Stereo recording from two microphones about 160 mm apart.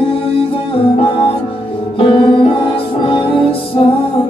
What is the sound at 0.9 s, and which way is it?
Music, 35° left (ahead or behind).